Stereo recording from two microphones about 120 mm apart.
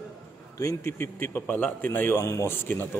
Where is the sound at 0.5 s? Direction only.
25° left (ahead or behind).